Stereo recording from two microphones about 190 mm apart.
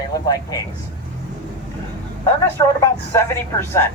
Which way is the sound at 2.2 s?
15° left (ahead or behind).